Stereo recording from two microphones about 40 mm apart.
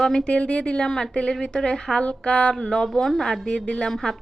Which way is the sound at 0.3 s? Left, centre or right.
Left.